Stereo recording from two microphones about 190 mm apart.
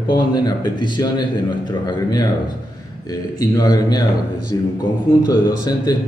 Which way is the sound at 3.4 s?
20° left (ahead or behind).